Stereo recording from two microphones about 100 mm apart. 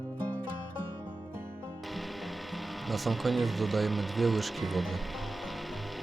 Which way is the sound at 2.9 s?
Centre (ahead or behind).